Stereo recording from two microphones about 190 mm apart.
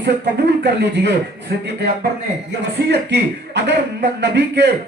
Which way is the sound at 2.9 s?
65° right (ahead or behind).